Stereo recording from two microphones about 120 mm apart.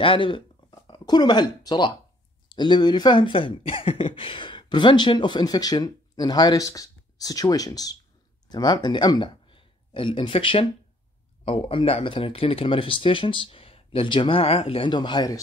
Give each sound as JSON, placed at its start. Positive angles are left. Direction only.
{"t": 0.0, "sound": "speech", "side_deg": 45}